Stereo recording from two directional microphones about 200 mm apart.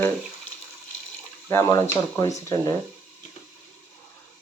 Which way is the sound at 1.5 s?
15° left (ahead or behind).